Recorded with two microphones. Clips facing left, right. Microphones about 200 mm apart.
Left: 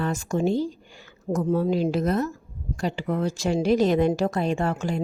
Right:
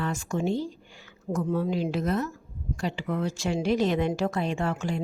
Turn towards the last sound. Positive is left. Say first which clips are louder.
# left 3 dB
turn(degrees=40)  # may be behind; listen again after turning